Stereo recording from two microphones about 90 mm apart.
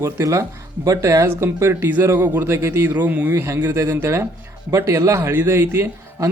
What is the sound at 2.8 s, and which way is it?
Speech, 20° right (ahead or behind).